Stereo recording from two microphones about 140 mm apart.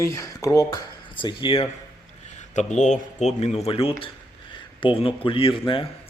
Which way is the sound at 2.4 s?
60° left (ahead or behind).